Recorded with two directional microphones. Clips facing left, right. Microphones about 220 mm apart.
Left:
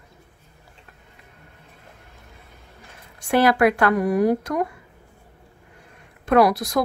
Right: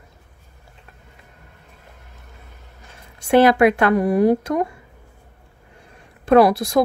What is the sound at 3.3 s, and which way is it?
Speech, 25° right (ahead or behind).